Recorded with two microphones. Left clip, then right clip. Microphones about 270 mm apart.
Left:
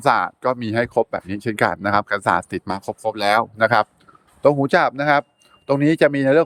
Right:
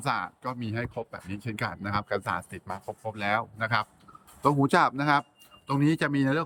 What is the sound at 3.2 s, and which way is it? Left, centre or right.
Speech, centre.